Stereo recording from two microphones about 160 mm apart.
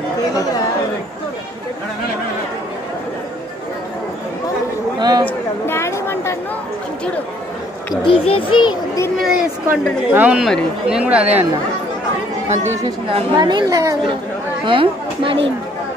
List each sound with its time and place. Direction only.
4.9 s a sound: 25° right (ahead or behind)
5.2 s a sound: 15° left (ahead or behind)
7.9 s a child's voice: 30° left (ahead or behind)
9.2 s speech: 5° right (ahead or behind)
12.8 s a woman's voice: 30° right (ahead or behind)
14.7 s a woman's voice: 35° right (ahead or behind)